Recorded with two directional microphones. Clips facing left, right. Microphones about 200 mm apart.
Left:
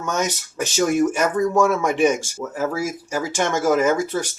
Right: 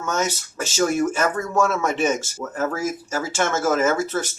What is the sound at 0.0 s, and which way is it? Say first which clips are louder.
Speech: left 1 dB; 15° left (ahead or behind).